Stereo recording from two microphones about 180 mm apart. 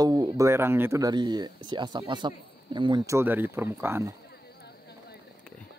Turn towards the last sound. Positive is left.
turn(degrees=-15)  # may be behind; listen again after turning